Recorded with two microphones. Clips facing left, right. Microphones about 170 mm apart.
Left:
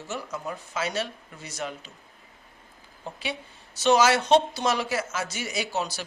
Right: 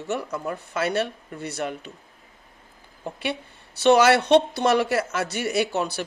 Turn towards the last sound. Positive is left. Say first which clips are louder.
# right 6 dB
turn(degrees=-60)  # may be behind; listen again after turning